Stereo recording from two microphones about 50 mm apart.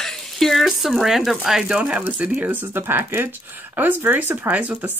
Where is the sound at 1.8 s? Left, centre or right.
Right.